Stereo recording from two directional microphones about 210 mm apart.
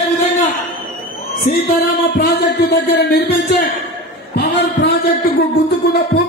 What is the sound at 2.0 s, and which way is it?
A man's voice, 50° left (ahead or behind).